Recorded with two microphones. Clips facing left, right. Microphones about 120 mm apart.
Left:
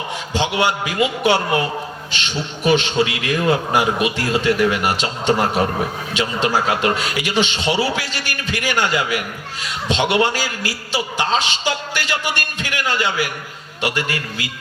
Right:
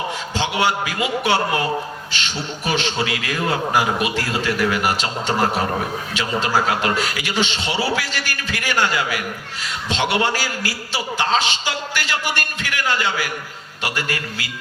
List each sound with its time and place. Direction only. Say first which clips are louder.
0.3 s a man's voice: left 2 dB; 20° left (ahead or behind)
2.6 s a man's voice: left 6 dB; 20° left (ahead or behind)